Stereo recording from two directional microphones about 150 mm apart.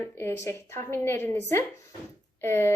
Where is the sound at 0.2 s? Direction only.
15° left (ahead or behind).